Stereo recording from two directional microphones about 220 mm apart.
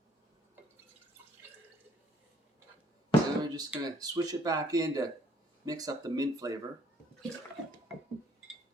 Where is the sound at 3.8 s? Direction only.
15° right (ahead or behind).